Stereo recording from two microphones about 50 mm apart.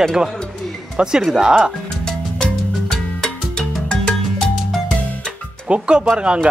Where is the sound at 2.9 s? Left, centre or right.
Centre.